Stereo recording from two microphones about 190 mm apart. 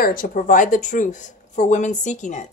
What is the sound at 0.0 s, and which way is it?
Speech, 45° left (ahead or behind).